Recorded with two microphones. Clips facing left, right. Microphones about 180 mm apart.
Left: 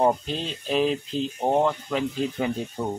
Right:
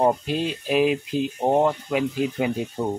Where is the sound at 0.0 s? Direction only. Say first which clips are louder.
Right 2 dB; 5° right (ahead or behind).